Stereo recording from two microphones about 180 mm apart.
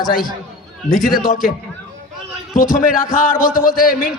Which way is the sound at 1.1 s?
50° left (ahead or behind).